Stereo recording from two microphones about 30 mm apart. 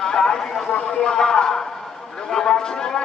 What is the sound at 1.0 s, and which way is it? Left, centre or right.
A man's voice, centre.